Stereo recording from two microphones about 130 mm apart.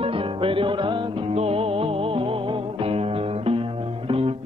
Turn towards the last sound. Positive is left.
turn(degrees=-50)  # may be behind; listen again after turning